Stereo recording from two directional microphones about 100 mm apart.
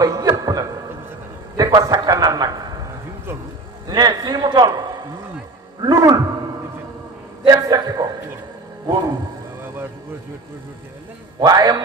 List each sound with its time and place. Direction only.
0.0 s chuckle: 40° right (ahead or behind)
1.6 s a man's voice: 40° right (ahead or behind)
3.8 s a man's voice: 40° right (ahead or behind)
7.4 s a man's voice: 40° right (ahead or behind)
11.3 s a man's voice: 40° right (ahead or behind)